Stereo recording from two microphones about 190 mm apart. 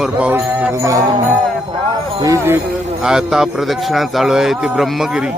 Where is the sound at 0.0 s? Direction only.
5° right (ahead or behind).